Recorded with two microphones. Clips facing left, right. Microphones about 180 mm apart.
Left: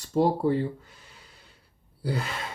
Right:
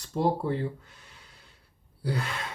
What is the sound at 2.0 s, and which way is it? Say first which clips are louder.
Speech: left 1 dB; centre (ahead or behind).